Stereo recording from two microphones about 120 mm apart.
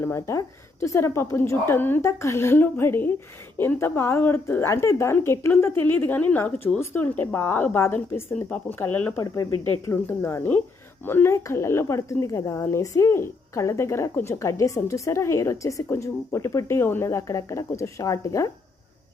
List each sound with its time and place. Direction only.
0.0 s speech: 25° left (ahead or behind)
9.2 s speech: 30° left (ahead or behind)